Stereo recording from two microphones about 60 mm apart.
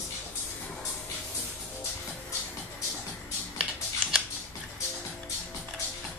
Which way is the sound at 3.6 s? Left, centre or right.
Centre.